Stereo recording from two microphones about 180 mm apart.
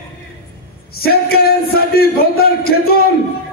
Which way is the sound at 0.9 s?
60° left (ahead or behind).